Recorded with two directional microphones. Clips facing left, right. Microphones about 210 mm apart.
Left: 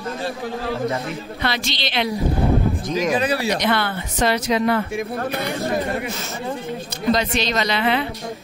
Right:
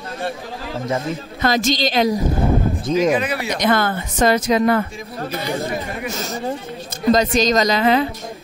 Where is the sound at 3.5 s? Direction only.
45° right (ahead or behind).